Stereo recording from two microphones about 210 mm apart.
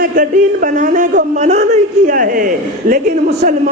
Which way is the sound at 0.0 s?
40° right (ahead or behind).